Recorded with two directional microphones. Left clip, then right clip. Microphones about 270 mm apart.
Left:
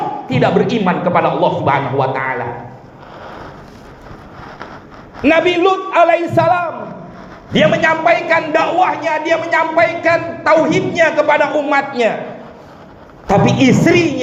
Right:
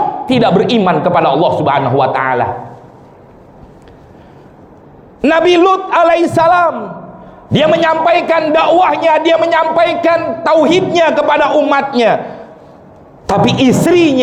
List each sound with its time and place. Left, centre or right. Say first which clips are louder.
0.3 s a man's voice: right 2 dB; right
5.2 s a man's voice: right 3 dB; right
13.2 s a man's voice: right 1 dB; right